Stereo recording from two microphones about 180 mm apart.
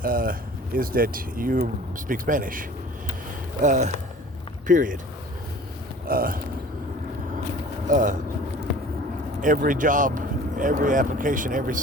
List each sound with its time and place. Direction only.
0.0 s speech: 50° right (ahead or behind)
6.1 s speech: 55° right (ahead or behind)
7.9 s speech: 45° right (ahead or behind)
9.4 s speech: 50° right (ahead or behind)